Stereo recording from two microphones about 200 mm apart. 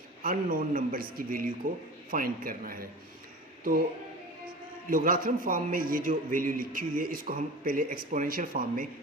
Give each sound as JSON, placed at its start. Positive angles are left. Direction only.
{"t": 0.2, "sound": "a man's voice", "side_deg": -45}
{"t": 4.9, "sound": "a man's voice", "side_deg": -45}